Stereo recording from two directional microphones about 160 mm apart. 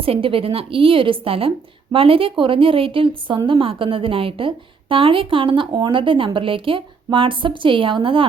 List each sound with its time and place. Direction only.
0.0 s a woman's voice: 35° right (ahead or behind)